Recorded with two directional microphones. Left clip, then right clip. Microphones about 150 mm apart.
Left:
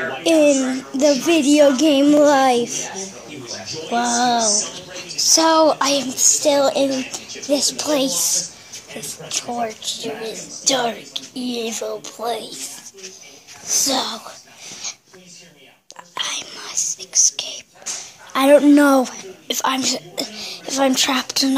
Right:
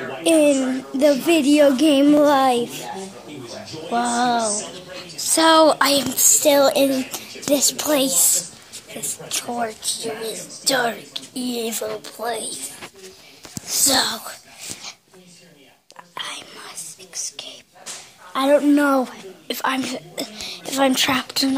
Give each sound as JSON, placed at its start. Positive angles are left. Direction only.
{"t": 0.2, "sound": "a woman's voice", "side_deg": 5}
{"t": 3.9, "sound": "a woman's voice", "side_deg": 5}
{"t": 5.2, "sound": "a woman's voice", "side_deg": 0}
{"t": 13.7, "sound": "a woman's voice", "side_deg": 10}
{"t": 16.2, "sound": "whispering", "side_deg": 10}
{"t": 18.3, "sound": "a woman's voice", "side_deg": 20}
{"t": 18.9, "sound": "a woman's voice", "side_deg": 5}